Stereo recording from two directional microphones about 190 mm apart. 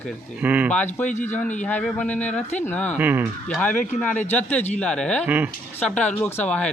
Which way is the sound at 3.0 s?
10° right (ahead or behind).